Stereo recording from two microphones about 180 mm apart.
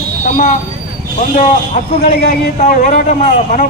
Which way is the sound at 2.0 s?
50° left (ahead or behind).